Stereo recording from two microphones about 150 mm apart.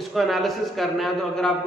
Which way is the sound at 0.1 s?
Centre (ahead or behind).